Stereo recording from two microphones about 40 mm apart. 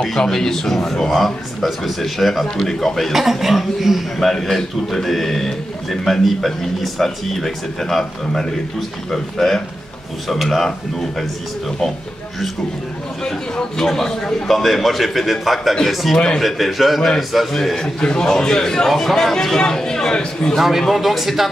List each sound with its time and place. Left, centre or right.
0.0 s speech: centre
3.1 s speech: centre
4.2 s speech: centre
13.2 s speech: centre
14.5 s speech: centre
17.8 s speech: left
20.5 s speech: centre